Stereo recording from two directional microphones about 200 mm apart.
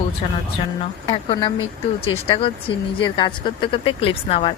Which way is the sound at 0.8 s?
25° left (ahead or behind).